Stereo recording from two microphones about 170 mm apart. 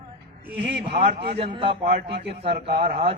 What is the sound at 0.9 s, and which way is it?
Speech, 35° right (ahead or behind).